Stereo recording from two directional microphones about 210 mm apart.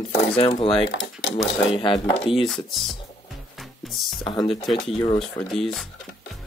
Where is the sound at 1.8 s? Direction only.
25° left (ahead or behind).